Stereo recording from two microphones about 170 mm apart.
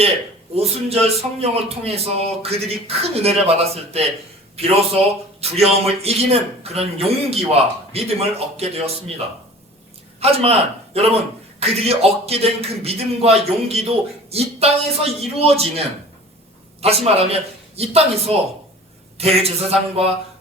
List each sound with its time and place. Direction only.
0.5 s a man's voice: 35° right (ahead or behind)
16.8 s a man's voice: 35° right (ahead or behind)